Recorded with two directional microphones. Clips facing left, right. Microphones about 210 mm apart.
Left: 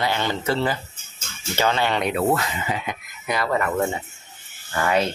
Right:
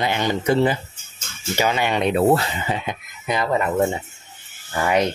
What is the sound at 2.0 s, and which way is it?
Speech, 30° right (ahead or behind).